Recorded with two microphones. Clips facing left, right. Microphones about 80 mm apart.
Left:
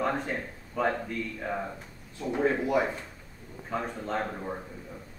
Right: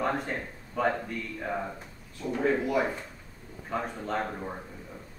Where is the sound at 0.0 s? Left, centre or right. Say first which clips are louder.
Even; centre.